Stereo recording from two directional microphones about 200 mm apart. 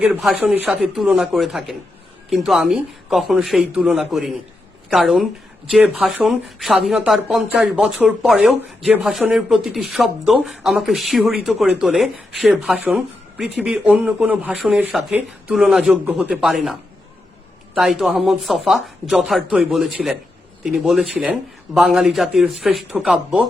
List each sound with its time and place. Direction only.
0.0 s speech: centre (ahead or behind)
17.7 s speech: centre (ahead or behind)